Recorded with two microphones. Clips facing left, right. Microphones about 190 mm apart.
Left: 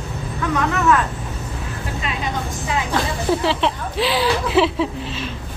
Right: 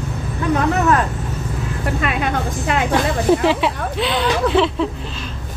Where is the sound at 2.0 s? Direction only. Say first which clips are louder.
Right 4 dB; 60° right (ahead or behind).